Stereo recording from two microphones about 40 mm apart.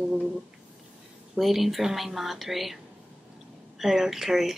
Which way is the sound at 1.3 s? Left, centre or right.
Centre.